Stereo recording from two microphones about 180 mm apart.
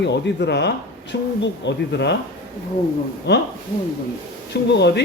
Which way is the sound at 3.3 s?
70° left (ahead or behind).